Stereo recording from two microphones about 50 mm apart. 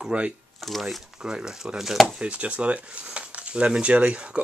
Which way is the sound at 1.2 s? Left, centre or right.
Centre.